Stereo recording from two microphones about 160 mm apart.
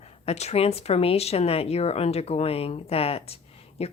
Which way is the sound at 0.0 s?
40° left (ahead or behind).